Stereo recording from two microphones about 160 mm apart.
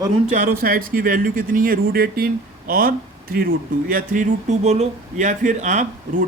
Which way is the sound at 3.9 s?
55° right (ahead or behind).